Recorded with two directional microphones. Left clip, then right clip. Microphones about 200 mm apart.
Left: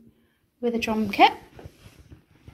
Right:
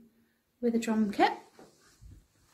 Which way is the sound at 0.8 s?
5° right (ahead or behind).